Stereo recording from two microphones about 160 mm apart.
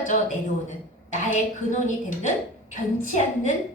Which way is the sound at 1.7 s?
50° left (ahead or behind).